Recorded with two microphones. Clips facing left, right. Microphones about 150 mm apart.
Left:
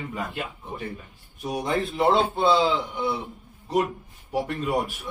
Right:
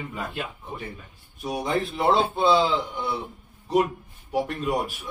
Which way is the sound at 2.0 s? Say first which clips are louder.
Left 1 dB; 20° left (ahead or behind).